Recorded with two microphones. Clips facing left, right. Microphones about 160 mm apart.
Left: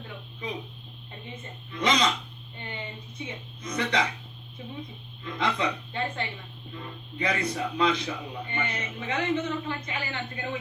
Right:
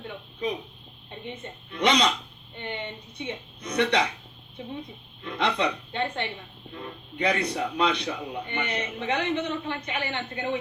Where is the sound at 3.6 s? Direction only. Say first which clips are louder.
Right 5 dB; 70° right (ahead or behind).